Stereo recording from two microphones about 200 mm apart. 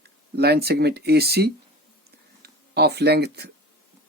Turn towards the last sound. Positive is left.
turn(degrees=-55)  # may be behind; listen again after turning